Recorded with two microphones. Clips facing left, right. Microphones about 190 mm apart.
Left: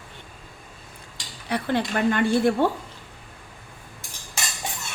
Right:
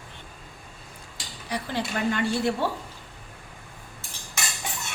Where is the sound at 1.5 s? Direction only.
60° left (ahead or behind).